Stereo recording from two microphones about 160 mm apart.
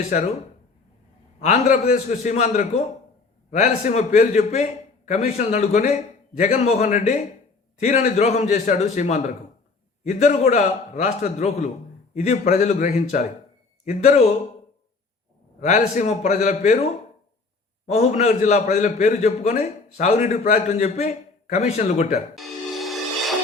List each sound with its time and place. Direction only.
0.1 s a man's voice: 50° left (ahead or behind)
1.4 s a man's voice: 50° left (ahead or behind)
15.6 s a man's voice: 50° left (ahead or behind)
22.4 s music: centre (ahead or behind)